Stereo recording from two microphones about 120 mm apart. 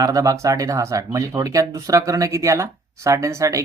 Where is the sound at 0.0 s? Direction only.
30° right (ahead or behind).